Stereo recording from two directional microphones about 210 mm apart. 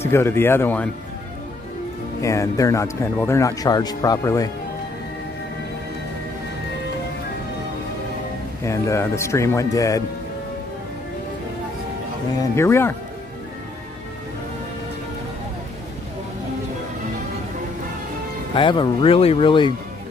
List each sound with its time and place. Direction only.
0.0 s speech: 10° left (ahead or behind)
2.2 s speech: 15° left (ahead or behind)
8.6 s speech: 15° left (ahead or behind)
12.5 s speech: 10° left (ahead or behind)
18.5 s speech: 25° left (ahead or behind)